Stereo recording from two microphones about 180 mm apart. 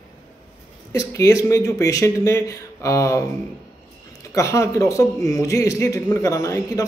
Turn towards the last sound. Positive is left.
turn(degrees=15)  # may be behind; listen again after turning